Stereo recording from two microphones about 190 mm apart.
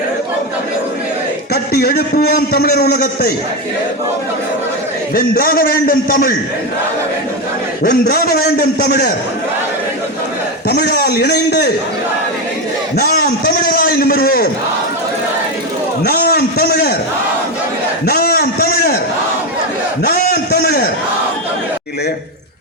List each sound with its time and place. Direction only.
1.5 s a man's voice: 55° left (ahead or behind)
5.1 s a man's voice: 50° left (ahead or behind)
7.9 s a man's voice: 55° left (ahead or behind)
10.7 s a man's voice: 60° left (ahead or behind)
13.0 s a man's voice: 55° left (ahead or behind)
16.0 s a sound: 55° left (ahead or behind)
18.0 s a sound: 55° left (ahead or behind)
20.1 s a man's voice: 50° left (ahead or behind)